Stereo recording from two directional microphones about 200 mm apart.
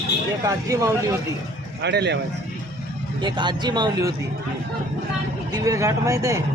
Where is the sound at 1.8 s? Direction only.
60° right (ahead or behind).